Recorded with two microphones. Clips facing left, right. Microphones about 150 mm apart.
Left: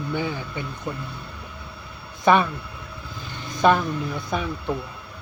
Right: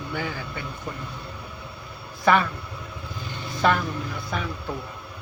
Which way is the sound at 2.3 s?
20° left (ahead or behind).